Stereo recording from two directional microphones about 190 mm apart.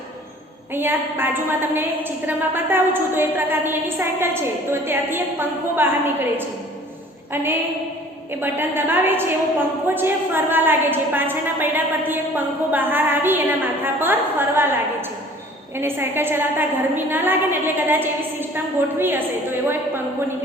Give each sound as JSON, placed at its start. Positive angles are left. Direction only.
{"t": 0.7, "sound": "a woman's voice", "side_deg": -10}
{"t": 8.3, "sound": "a woman's voice", "side_deg": -10}
{"t": 15.8, "sound": "a woman's voice", "side_deg": -10}